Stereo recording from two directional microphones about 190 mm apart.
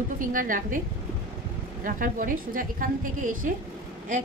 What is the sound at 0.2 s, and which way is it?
Speech, 45° right (ahead or behind).